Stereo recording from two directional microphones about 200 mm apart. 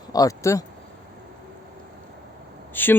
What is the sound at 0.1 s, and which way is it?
Speech, 15° left (ahead or behind).